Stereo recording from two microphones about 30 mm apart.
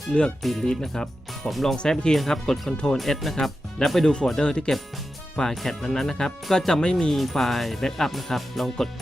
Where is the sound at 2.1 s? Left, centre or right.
Centre.